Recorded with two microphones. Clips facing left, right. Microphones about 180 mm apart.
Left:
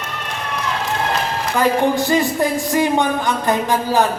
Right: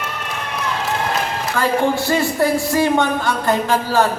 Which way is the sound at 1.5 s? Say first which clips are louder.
Left 2 dB; 15° left (ahead or behind).